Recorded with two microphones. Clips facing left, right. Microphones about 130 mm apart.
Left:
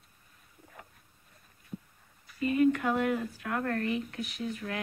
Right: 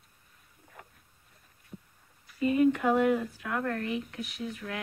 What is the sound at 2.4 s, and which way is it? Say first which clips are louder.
Speech: right 1 dB; 20° right (ahead or behind).